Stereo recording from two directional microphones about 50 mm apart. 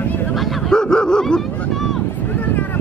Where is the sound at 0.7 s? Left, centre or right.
Centre.